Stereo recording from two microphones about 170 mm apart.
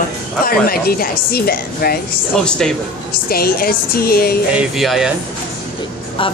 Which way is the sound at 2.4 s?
5° left (ahead or behind).